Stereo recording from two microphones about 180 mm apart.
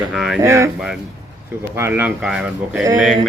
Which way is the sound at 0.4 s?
15° right (ahead or behind).